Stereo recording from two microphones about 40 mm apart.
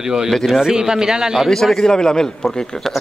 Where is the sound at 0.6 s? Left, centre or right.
Centre.